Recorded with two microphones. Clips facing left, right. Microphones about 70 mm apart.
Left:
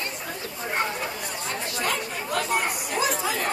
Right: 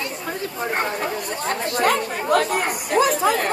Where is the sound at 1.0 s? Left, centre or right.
Right.